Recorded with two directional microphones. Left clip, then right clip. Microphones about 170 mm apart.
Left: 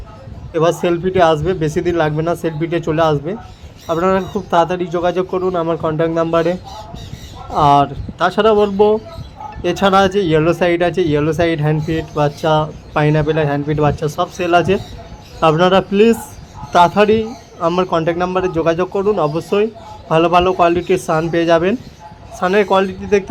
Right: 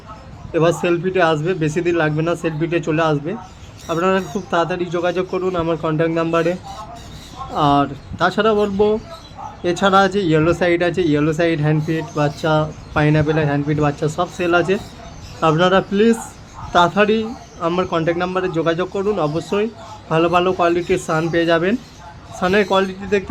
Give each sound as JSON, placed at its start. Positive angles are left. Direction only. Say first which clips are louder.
{"t": 0.5, "sound": "speech", "louder": "left 2 dB", "side_deg": 15}